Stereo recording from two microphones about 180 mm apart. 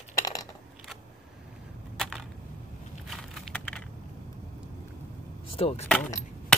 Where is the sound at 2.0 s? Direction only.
Centre (ahead or behind).